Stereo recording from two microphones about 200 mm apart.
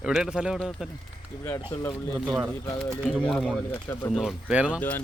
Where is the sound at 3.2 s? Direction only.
Centre (ahead or behind).